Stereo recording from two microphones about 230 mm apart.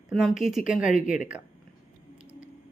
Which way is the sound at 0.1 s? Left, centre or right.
Centre.